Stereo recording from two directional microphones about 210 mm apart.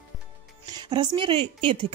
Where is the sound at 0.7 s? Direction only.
20° right (ahead or behind).